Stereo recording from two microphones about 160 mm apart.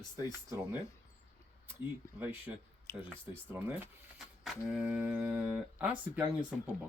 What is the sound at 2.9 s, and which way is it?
Speech, 15° left (ahead or behind).